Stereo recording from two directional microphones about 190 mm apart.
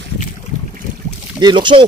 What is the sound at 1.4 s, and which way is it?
Speech, 25° right (ahead or behind).